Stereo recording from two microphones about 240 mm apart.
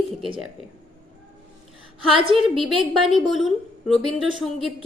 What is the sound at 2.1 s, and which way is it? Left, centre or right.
Speech, right.